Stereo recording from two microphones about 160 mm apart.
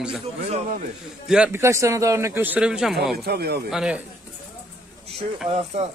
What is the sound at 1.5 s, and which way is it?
A man's voice, 15° right (ahead or behind).